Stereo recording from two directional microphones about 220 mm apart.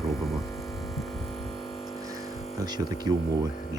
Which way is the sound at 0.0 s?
Centre (ahead or behind).